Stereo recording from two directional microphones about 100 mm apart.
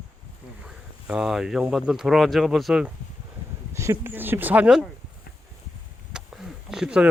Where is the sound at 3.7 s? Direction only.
30° right (ahead or behind); by 4.8 s 10° right (ahead or behind).